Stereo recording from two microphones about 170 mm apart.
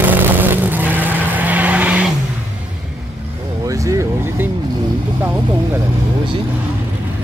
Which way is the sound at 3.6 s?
20° right (ahead or behind).